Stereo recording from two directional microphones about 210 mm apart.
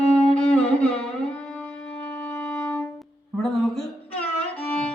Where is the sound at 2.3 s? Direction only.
5° left (ahead or behind).